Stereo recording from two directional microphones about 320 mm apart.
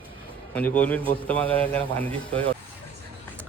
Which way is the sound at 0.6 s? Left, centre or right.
Centre.